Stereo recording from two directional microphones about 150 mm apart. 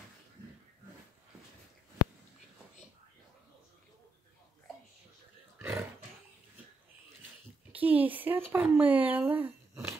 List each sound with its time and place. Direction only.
5.6 s roaring cats: 15° right (ahead or behind)
7.7 s speech: 10° right (ahead or behind)